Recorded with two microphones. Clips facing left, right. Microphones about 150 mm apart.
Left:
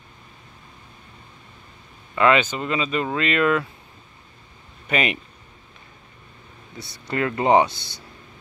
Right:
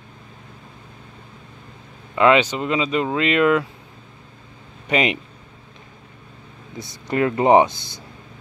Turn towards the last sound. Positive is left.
turn(degrees=-20)  # may be behind; listen again after turning